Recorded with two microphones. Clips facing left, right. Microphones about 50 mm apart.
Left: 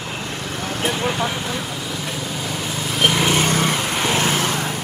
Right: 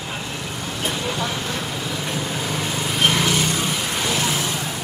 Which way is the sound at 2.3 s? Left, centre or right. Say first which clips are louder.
Right 1 dB; centre.